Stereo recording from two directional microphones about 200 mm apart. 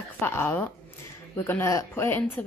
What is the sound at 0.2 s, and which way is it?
A woman's voice, 10° left (ahead or behind).